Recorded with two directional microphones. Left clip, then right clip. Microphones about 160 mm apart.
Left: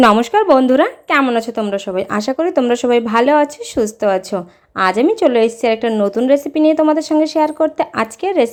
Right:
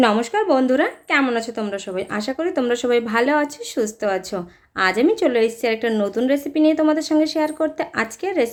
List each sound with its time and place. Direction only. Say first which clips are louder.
0.0 s speech: left 7 dB; 35° left (ahead or behind)